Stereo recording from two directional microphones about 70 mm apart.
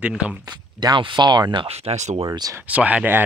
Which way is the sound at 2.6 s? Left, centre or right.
Centre.